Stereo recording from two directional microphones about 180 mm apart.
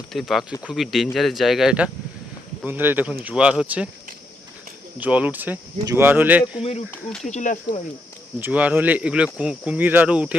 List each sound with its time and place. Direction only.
0.1 s speech: centre (ahead or behind)
4.9 s speech: 10° right (ahead or behind)
6.6 s speech: 35° left (ahead or behind)
6.9 s speech: 5° left (ahead or behind)
7.3 s speech: 40° left (ahead or behind)
8.4 s speech: 10° right (ahead or behind)